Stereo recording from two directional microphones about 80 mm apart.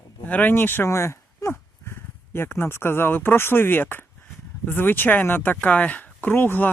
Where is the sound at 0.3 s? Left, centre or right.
Left.